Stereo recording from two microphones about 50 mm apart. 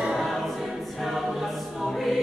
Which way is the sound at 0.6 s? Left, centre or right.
Centre.